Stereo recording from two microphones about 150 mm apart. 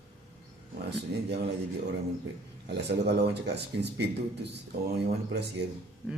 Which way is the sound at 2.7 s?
90° right.